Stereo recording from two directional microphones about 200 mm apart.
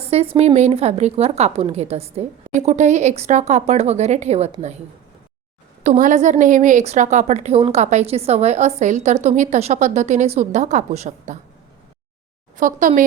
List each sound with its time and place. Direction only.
0.1 s a woman's voice: 30° right (ahead or behind)
5.8 s a woman's voice: 40° right (ahead or behind)
12.5 s a woman's voice: 40° right (ahead or behind)